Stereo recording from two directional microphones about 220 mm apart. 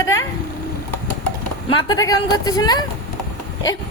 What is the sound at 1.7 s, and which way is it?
A woman's voice, 20° left (ahead or behind).